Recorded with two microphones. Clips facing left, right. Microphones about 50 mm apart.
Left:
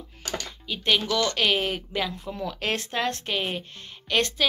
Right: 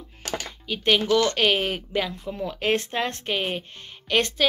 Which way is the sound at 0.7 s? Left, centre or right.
Right.